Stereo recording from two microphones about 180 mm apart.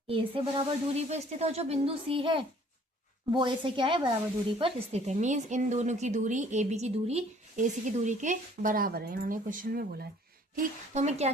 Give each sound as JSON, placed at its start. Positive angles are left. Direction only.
{"t": 0.1, "sound": "speech", "side_deg": -30}
{"t": 10.5, "sound": "speech", "side_deg": -45}